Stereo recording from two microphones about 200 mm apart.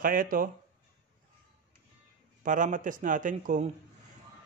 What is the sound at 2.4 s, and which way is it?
A man's voice, 40° right (ahead or behind).